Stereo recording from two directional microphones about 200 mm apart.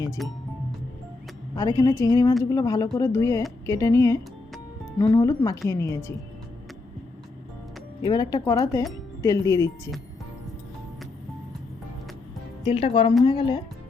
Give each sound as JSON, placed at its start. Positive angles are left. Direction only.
{"t": 0.2, "sound": "speech", "side_deg": 0}
{"t": 1.5, "sound": "speech", "side_deg": 15}
{"t": 8.0, "sound": "speech", "side_deg": 20}
{"t": 12.6, "sound": "speech", "side_deg": 30}